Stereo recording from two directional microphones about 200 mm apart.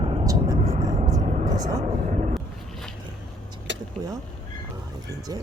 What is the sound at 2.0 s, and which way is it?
Speech, 35° right (ahead or behind).